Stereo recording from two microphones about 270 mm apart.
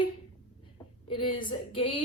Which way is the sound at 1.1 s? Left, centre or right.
Centre.